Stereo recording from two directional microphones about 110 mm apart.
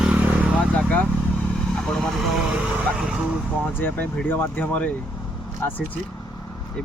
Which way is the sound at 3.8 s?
15° left (ahead or behind).